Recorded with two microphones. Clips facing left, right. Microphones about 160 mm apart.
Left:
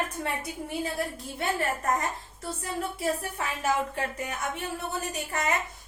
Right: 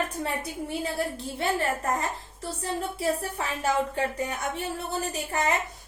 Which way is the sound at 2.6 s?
30° right (ahead or behind).